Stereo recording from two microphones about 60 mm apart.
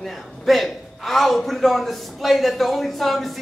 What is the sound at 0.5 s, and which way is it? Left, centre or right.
A woman's voice, centre.